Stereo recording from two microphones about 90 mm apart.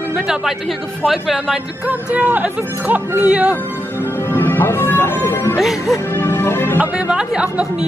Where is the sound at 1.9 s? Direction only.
20° right (ahead or behind).